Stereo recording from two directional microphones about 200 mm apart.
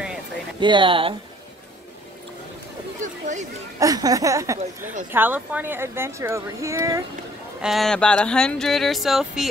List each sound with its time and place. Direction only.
0.6 s speech: 25° right (ahead or behind)
3.0 s a sound: 35° right (ahead or behind)
3.8 s speech: 20° right (ahead or behind)
7.6 s speech: centre (ahead or behind)